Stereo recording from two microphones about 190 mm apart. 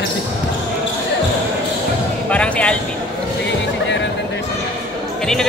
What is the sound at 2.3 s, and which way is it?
Music, 5° left (ahead or behind).